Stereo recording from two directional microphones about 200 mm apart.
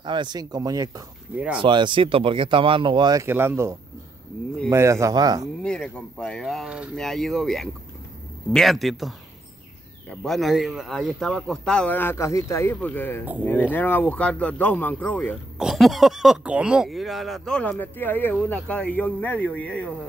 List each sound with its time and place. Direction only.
0.0 s speech: 20° right (ahead or behind)
1.3 s speech: 5° right (ahead or behind)
1.6 s speech: 25° right (ahead or behind)
5.6 s speech: 5° left (ahead or behind)